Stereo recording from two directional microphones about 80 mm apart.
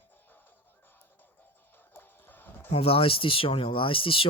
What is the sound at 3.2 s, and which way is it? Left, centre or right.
Speech, left.